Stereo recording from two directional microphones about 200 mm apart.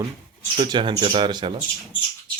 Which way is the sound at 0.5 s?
25° right (ahead or behind).